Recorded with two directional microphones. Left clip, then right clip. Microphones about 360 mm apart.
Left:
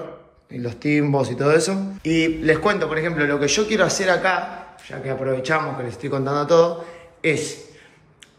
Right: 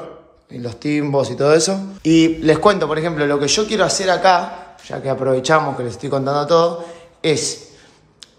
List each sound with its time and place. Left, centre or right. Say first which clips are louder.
0.5 s a man's voice: even; centre